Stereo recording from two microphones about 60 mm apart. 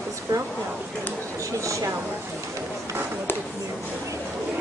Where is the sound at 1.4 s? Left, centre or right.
Right.